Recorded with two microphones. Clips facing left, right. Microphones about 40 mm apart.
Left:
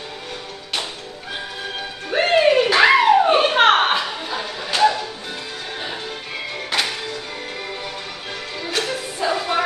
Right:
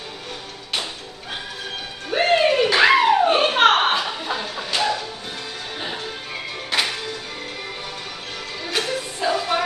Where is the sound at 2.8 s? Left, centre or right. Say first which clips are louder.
Left 2 dB; centre.